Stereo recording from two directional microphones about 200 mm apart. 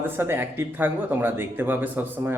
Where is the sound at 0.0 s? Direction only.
10° right (ahead or behind).